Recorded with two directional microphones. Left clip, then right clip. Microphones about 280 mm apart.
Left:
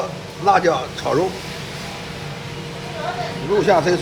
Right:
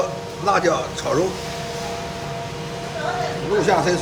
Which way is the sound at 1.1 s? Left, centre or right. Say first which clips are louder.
Left 2 dB; centre.